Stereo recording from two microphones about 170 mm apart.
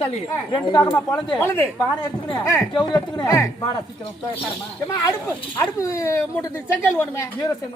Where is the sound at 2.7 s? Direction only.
25° left (ahead or behind).